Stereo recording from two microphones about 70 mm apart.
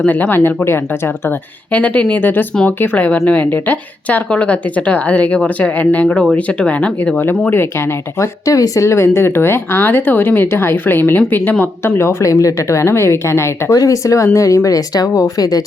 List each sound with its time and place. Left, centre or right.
0.0 s speech: left
1.7 s speech: left
8.2 s speech: left
11.9 s speech: left